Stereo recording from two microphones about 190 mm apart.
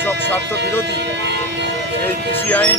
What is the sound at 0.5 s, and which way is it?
Speech, 65° right (ahead or behind).